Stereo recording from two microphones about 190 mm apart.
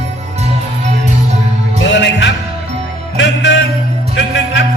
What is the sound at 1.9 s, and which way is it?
Music, 70° left (ahead or behind).